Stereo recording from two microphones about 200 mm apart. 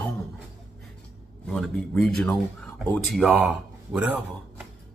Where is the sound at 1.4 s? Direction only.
Centre (ahead or behind).